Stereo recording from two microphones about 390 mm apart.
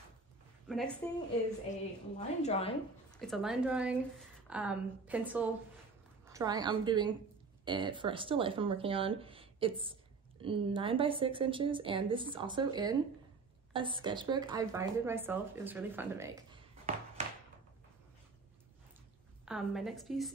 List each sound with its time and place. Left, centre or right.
0.7 s speech: centre
2.1 s a woman's voice: centre
3.2 s a woman's voice: centre
19.4 s a woman's voice: centre